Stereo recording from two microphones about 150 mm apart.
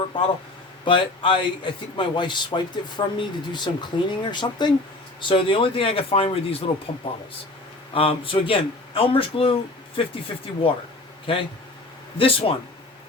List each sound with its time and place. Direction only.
0.9 s a man's voice: 35° left (ahead or behind)